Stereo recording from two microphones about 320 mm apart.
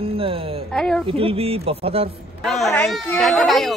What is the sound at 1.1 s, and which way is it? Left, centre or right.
Speech, centre.